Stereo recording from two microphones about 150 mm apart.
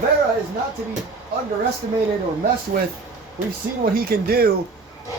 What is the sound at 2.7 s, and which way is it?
Speech, 80° right.